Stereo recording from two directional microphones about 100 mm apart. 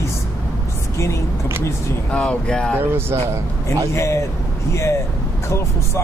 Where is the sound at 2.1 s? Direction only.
10° left (ahead or behind).